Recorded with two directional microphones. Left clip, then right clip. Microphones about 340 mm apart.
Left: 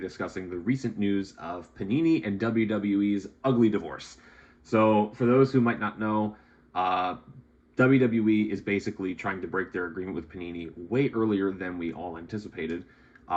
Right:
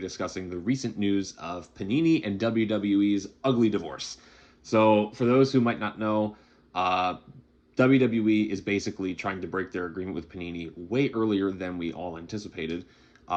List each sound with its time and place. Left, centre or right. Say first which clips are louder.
0.0 s speech: right 1 dB; centre